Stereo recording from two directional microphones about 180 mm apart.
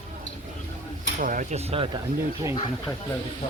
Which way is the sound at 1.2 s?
45° right (ahead or behind).